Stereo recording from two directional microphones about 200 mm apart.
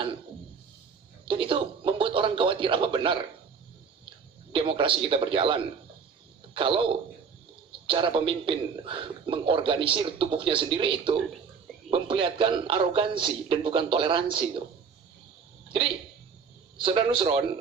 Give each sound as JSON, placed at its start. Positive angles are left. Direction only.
{"t": 1.2, "sound": "speech", "side_deg": -25}
{"t": 4.5, "sound": "a man's voice", "side_deg": -25}
{"t": 16.7, "sound": "a man's voice", "side_deg": -25}